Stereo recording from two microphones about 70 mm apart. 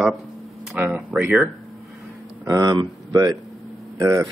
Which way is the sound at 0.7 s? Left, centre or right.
Centre.